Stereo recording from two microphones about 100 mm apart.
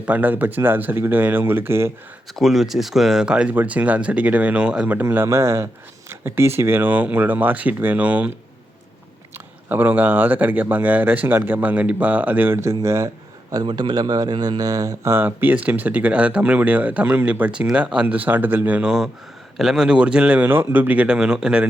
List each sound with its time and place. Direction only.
0.0 s speech: 15° right (ahead or behind)
2.3 s speech: centre (ahead or behind)
4.9 s speech: 20° right (ahead or behind)
9.6 s speech: 20° right (ahead or behind)
13.5 s speech: 45° right (ahead or behind)
15.1 s speech: 20° right (ahead or behind)